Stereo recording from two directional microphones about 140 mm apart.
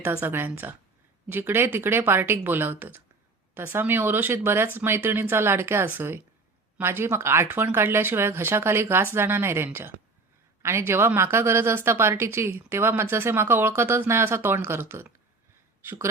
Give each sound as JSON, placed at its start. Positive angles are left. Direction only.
{"t": 0.0, "sound": "a woman's voice", "side_deg": -15}